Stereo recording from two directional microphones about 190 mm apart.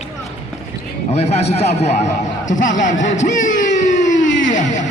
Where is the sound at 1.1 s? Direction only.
35° left (ahead or behind).